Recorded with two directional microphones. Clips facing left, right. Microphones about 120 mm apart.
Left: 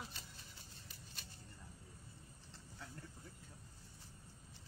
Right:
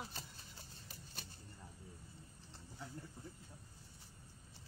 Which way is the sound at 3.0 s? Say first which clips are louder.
Right 2 dB; 15° right (ahead or behind).